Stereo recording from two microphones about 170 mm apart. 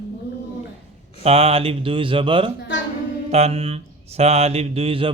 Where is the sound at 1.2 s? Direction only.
35° right (ahead or behind).